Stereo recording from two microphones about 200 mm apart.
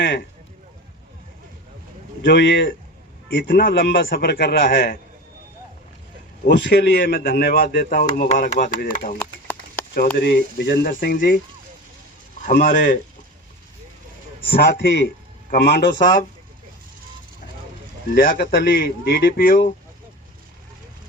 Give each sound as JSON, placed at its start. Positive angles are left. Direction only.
{"t": 0.0, "sound": "speech", "side_deg": 55}
{"t": 2.2, "sound": "a man's voice", "side_deg": 60}
{"t": 6.5, "sound": "speech", "side_deg": 60}
{"t": 9.1, "sound": "a sound", "side_deg": 10}
{"t": 10.2, "sound": "a man's voice", "side_deg": 55}
{"t": 12.4, "sound": "speech", "side_deg": 40}
{"t": 14.5, "sound": "a man's voice", "side_deg": 50}
{"t": 18.1, "sound": "speech", "side_deg": 45}